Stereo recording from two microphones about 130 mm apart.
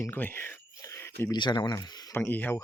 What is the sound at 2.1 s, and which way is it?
Speech, 15° left (ahead or behind).